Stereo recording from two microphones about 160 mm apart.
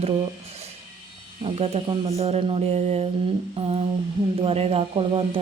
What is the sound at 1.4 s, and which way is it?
Speech, 40° right (ahead or behind).